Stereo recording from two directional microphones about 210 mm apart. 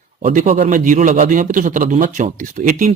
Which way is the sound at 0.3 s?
40° right (ahead or behind).